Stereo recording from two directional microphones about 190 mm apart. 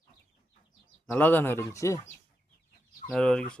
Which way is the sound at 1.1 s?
10° left (ahead or behind).